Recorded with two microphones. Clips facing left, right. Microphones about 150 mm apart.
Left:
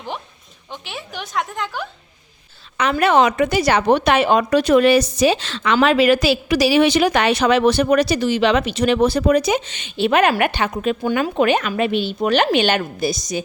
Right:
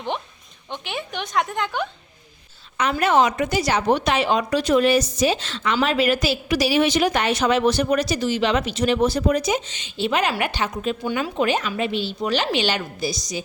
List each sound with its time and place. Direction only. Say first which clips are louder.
0.7 s a woman's voice: right 2 dB; 5° left (ahead or behind)
2.9 s a woman's voice: left 3 dB; 70° left (ahead or behind); by 13.4 s 55° left (ahead or behind)